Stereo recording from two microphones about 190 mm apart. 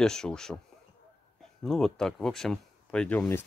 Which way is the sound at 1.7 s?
Centre (ahead or behind).